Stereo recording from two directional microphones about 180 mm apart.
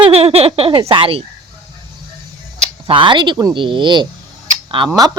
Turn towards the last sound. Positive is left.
turn(degrees=-30)  # may be behind; listen again after turning